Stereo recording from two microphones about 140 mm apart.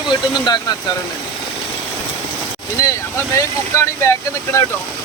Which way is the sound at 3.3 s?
20° left (ahead or behind).